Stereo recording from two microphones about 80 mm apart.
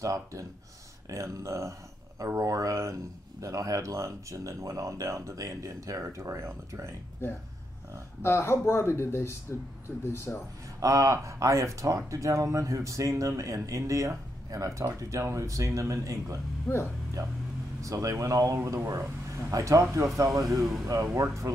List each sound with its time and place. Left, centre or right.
0.0 s speech: right
8.2 s speech: left
10.8 s speech: right
16.7 s speech: left
17.8 s speech: right